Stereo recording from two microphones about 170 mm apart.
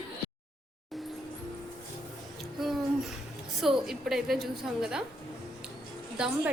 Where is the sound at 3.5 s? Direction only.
Centre (ahead or behind).